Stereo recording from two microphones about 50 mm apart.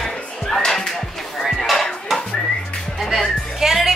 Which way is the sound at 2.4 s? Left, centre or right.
Centre.